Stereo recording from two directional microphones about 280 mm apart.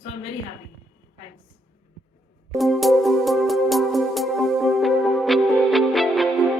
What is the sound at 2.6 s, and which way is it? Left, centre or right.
Music, centre.